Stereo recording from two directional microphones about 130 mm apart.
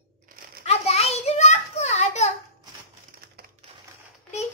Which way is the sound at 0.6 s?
50° left (ahead or behind).